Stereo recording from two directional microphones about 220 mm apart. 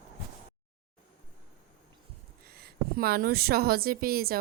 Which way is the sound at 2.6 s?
45° right (ahead or behind).